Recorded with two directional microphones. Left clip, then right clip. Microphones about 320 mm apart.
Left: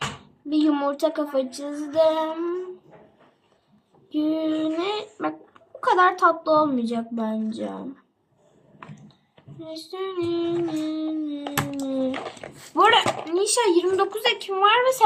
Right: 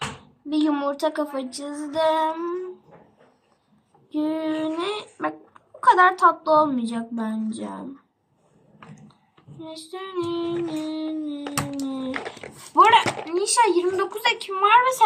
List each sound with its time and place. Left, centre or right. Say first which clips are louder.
0.5 s speech: left 1 dB; centre
4.1 s speech: left 1 dB; centre
9.6 s speech: left 3 dB; centre
11.3 s a sound: left 1 dB; centre
12.5 s speech: right 2 dB; centre